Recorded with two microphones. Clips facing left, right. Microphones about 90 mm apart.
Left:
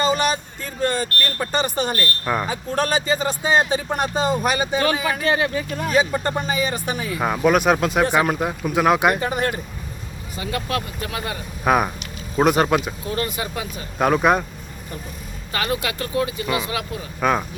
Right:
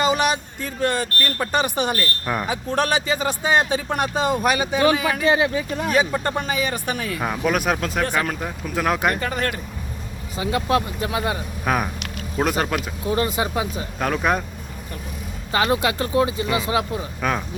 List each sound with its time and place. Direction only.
0.0 s speech: 10° right (ahead or behind)
5.2 s speech: 15° right (ahead or behind); by 9.6 s 15° left (ahead or behind)
10.3 s speech: 20° right (ahead or behind)
11.6 s speech: 5° left (ahead or behind)
13.1 s speech: 20° right (ahead or behind)
14.0 s speech: 10° left (ahead or behind)
15.5 s speech: 25° right (ahead or behind)
17.2 s speech: 5° left (ahead or behind)